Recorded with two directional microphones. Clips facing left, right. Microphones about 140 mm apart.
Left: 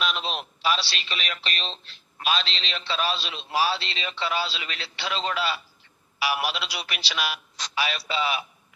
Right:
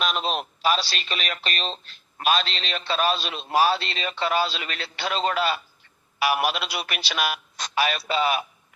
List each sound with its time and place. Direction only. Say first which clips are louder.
0.0 s speech: right 3 dB; 45° right (ahead or behind)